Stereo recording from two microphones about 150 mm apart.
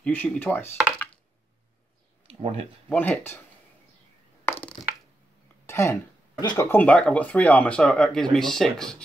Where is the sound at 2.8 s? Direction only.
10° left (ahead or behind).